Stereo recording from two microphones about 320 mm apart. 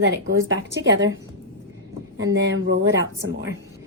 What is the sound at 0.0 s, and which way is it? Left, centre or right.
Speech, right.